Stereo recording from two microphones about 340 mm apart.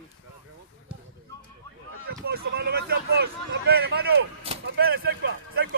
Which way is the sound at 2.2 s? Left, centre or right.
Right.